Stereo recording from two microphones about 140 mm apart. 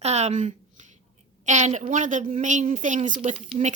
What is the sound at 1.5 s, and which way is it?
A woman's voice, 55° right (ahead or behind).